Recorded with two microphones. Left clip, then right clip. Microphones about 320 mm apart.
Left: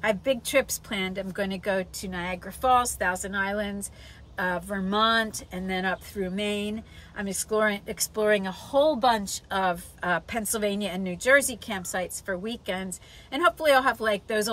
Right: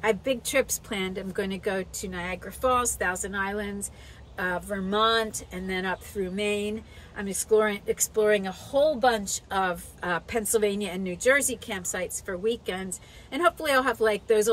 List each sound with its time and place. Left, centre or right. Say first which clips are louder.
0.0 s speech: even; centre